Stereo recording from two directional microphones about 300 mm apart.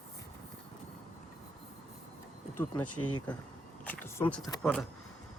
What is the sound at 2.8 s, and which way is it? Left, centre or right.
Speech, left.